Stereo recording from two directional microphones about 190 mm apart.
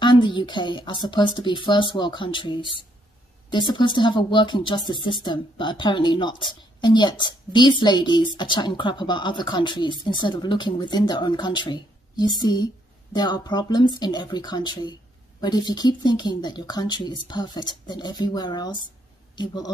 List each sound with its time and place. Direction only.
0.0 s speech: 25° left (ahead or behind)